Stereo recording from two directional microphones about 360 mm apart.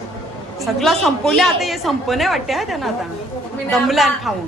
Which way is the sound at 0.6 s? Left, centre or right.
Centre.